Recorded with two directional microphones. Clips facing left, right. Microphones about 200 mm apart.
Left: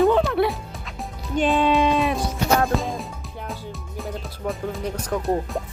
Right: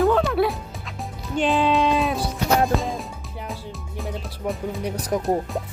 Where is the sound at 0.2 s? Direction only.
Centre (ahead or behind).